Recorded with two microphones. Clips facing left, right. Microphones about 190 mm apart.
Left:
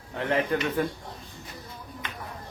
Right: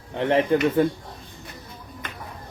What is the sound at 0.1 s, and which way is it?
Speech, 30° right (ahead or behind).